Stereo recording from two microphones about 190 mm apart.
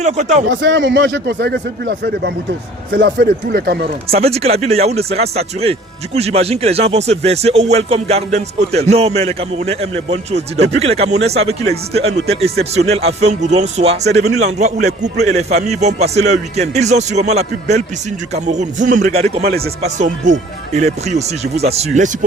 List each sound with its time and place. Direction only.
0.0 s a man's voice: 40° right (ahead or behind)
0.4 s speech: 75° right (ahead or behind); by 3.8 s 55° right (ahead or behind)
4.1 s a man's voice: 30° right (ahead or behind)